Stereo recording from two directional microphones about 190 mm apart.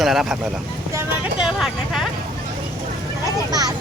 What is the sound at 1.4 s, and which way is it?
Speech, 5° right (ahead or behind).